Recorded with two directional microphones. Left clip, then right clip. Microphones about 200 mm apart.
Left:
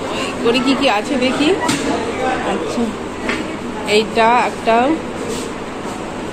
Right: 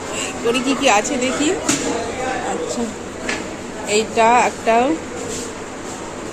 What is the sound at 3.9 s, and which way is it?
Speech, 15° right (ahead or behind).